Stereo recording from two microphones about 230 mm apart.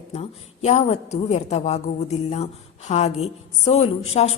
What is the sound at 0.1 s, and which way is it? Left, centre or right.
A woman's voice, left.